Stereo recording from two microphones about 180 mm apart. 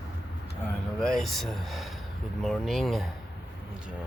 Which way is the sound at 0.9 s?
Centre (ahead or behind).